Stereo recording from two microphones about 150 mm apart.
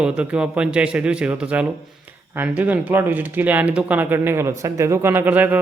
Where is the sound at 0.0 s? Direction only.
5° right (ahead or behind).